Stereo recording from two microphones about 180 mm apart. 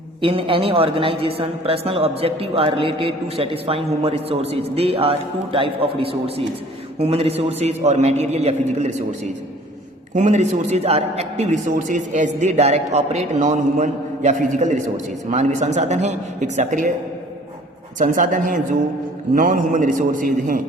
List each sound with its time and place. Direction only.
0.2 s a man's voice: 30° right (ahead or behind)
10.2 s a man's voice: 40° right (ahead or behind)
18.0 s a man's voice: 45° right (ahead or behind)